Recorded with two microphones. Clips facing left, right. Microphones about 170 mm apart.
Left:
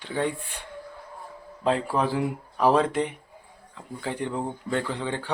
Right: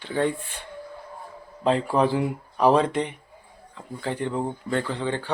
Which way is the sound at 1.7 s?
5° left (ahead or behind).